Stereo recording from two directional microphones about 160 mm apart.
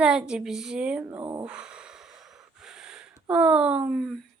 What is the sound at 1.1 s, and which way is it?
Speech, 20° right (ahead or behind).